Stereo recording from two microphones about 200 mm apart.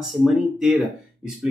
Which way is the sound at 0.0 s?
Centre (ahead or behind).